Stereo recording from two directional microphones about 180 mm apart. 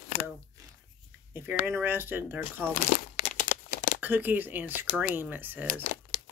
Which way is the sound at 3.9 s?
10° right (ahead or behind).